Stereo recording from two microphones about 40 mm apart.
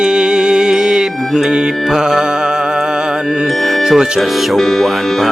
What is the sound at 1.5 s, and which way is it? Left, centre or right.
Speech, centre.